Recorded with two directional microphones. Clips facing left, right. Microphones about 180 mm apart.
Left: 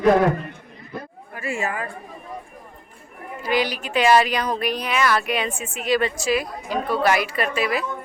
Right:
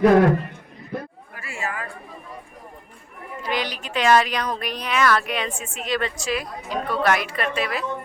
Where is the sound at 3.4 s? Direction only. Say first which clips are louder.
Left 5 dB; 5° left (ahead or behind).